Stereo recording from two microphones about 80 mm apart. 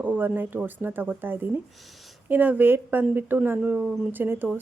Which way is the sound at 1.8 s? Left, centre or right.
Centre.